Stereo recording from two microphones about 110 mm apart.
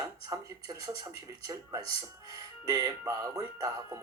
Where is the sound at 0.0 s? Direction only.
30° right (ahead or behind).